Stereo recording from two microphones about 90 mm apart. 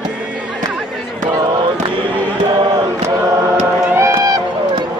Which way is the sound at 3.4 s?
30° right (ahead or behind).